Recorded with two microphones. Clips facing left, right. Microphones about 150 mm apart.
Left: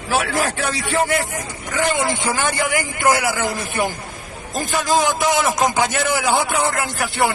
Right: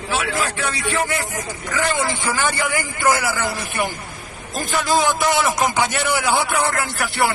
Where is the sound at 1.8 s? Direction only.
20° left (ahead or behind).